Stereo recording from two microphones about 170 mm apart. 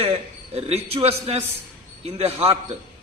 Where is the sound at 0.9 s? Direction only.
35° right (ahead or behind).